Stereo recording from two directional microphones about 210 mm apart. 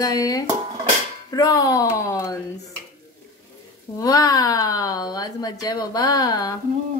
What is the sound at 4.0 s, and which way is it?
Speech, 15° left (ahead or behind).